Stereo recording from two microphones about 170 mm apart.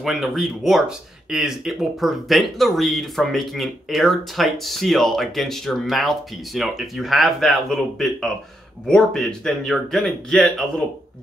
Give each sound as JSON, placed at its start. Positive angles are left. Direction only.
{"t": 0.0, "sound": "speech", "side_deg": 0}